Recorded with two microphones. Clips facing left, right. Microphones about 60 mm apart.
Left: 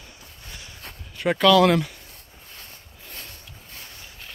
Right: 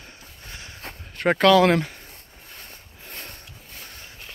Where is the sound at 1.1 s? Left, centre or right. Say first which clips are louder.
Right 1 dB; right.